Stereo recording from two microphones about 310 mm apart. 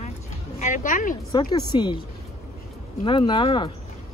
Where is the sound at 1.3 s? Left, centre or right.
Centre.